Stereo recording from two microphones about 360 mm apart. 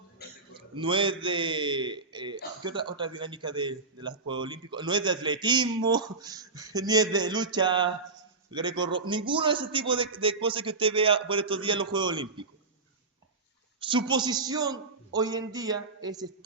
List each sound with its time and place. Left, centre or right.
0.2 s a sound: left
0.5 s a man's voice: centre
13.7 s a man's voice: centre